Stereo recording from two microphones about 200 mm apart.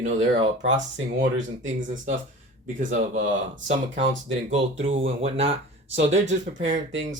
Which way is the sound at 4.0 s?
65° right (ahead or behind).